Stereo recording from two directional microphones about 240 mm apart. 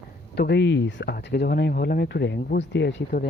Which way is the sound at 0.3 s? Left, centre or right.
Left.